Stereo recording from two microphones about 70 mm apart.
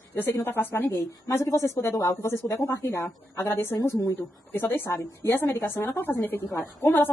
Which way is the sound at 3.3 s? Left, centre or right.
Left.